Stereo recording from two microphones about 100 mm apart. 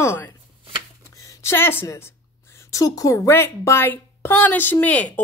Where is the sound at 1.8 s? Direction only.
30° left (ahead or behind).